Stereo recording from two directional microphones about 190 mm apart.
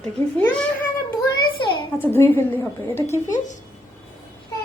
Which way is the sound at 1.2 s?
25° left (ahead or behind).